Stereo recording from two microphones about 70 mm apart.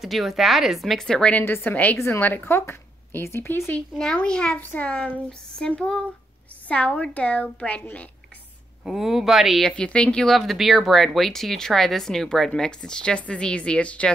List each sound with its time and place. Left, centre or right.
0.0 s speech: centre
1.4 s a woman's voice: left
2.0 s speech: left
2.2 s speech: left
3.9 s a woman's voice: centre
8.8 s speech: centre
9.7 s a woman's voice: centre